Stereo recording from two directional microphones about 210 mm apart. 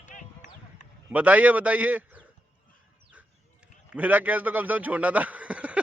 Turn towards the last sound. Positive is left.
turn(degrees=-5)  # may be behind; listen again after turning